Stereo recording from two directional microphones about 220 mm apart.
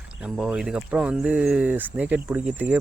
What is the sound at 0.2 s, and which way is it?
Speech, 5° right (ahead or behind).